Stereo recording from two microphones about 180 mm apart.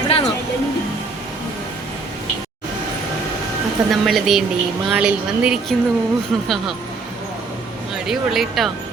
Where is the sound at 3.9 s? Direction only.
Centre (ahead or behind).